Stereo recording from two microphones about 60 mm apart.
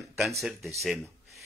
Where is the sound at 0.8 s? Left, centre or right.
Centre.